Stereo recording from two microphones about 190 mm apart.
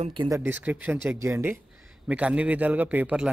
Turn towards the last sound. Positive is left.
turn(degrees=-10)  # may be behind; listen again after turning